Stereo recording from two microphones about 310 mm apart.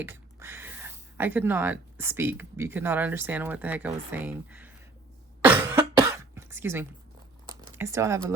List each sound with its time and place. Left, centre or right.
0.0 s speech: centre
5.4 s cough: centre
7.4 s computer keyboard: centre